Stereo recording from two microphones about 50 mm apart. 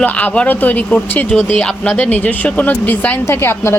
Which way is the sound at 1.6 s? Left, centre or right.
Left.